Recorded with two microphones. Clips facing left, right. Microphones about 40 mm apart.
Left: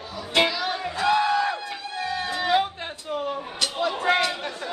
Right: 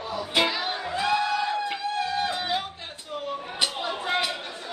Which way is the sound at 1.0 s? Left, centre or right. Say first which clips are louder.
Left 4 dB; left.